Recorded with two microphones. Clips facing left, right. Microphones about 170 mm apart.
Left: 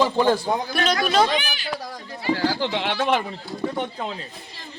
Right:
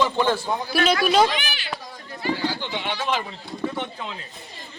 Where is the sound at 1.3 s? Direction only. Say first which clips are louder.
Left 4 dB; 40° left (ahead or behind).